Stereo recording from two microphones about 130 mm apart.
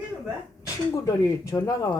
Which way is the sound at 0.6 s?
25° left (ahead or behind).